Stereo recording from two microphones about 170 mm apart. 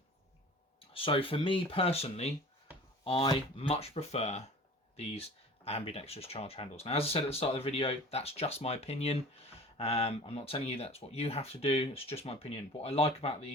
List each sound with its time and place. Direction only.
0.9 s speech: 30° left (ahead or behind)
5.6 s speech: 35° left (ahead or behind)